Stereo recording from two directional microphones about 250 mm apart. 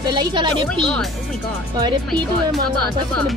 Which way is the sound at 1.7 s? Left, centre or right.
Centre.